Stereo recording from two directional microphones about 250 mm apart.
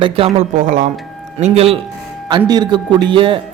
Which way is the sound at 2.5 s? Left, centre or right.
Centre.